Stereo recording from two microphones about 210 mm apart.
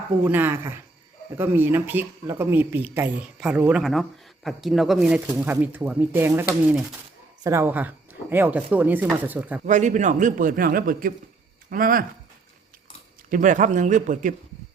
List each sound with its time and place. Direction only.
0.3 s speech: 10° right (ahead or behind)
9.6 s a man's voice: 35° right (ahead or behind)
13.3 s a man's voice: 35° right (ahead or behind)